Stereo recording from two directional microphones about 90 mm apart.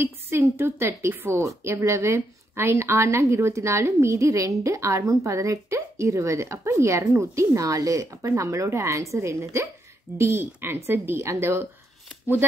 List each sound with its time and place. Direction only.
0.0 s a woman's voice: 30° right (ahead or behind)